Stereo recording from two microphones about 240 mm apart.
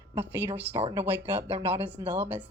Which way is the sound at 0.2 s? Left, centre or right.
Centre.